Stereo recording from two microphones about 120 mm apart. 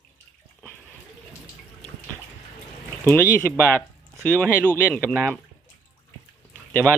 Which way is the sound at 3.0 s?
15° left (ahead or behind).